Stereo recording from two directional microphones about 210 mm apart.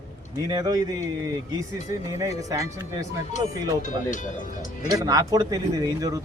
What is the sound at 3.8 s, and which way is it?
Speech, 35° left (ahead or behind).